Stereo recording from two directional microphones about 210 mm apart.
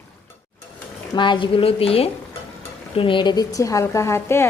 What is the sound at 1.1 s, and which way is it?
A woman's voice, 20° left (ahead or behind).